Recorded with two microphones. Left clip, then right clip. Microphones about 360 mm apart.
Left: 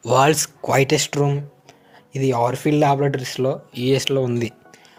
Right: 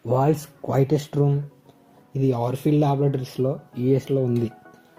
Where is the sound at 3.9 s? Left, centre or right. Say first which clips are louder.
Left 3 dB; left.